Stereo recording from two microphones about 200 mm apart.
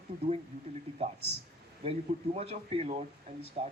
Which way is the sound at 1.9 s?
30° right (ahead or behind).